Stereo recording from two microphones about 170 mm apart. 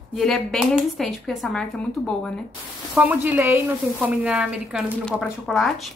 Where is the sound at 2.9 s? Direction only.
10° right (ahead or behind).